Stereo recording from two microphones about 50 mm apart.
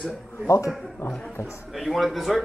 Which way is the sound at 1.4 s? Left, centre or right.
Left.